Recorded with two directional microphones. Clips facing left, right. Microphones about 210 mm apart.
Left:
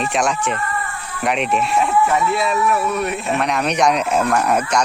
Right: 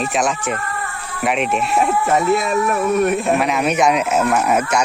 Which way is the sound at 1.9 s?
40° right (ahead or behind).